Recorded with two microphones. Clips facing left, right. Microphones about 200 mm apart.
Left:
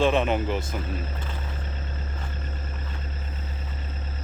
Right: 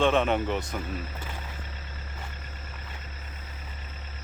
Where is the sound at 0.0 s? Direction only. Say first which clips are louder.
Left 1 dB; centre (ahead or behind).